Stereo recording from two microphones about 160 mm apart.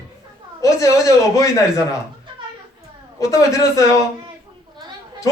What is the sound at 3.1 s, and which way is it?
Speech, 20° left (ahead or behind).